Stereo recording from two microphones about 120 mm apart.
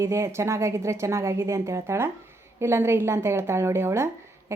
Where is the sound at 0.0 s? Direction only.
25° right (ahead or behind).